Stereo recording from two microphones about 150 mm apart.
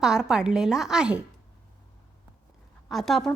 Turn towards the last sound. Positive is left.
turn(degrees=0)  # may be behind; listen again after turning